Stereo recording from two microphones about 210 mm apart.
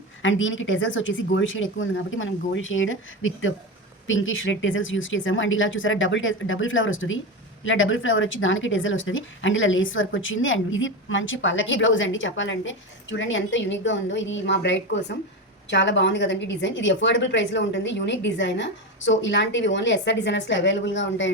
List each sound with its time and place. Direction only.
0.2 s a woman's voice: 65° left (ahead or behind)